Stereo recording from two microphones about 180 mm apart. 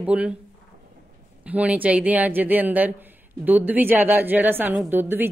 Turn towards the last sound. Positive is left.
turn(degrees=-10)  # may be behind; listen again after turning